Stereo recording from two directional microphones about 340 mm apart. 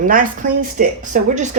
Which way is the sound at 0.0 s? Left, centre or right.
Right.